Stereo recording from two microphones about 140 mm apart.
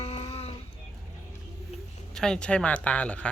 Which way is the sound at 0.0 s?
50° left (ahead or behind).